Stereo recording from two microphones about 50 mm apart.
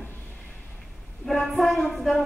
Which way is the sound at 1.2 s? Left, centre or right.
Centre.